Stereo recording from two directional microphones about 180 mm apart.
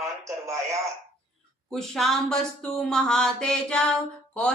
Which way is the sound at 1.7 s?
Centre (ahead or behind).